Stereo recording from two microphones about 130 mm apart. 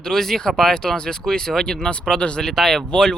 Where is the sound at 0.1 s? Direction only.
5° left (ahead or behind).